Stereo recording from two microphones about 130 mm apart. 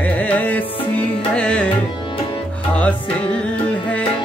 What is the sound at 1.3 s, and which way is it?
Tabla, 10° left (ahead or behind).